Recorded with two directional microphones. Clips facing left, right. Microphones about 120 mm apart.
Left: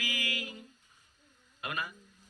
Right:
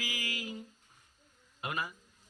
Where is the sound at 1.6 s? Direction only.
25° right (ahead or behind).